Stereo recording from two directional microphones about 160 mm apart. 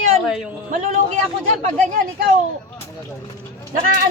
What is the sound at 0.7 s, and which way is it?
Speech, 50° right (ahead or behind).